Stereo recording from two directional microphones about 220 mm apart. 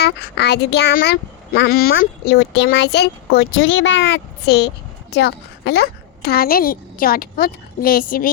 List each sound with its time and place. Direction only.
0.0 s a child's voice: 50° left (ahead or behind)